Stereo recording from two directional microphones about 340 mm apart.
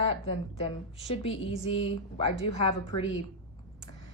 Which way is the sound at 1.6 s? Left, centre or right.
Centre.